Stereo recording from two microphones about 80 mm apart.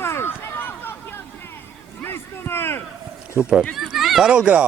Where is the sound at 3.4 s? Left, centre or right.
Centre.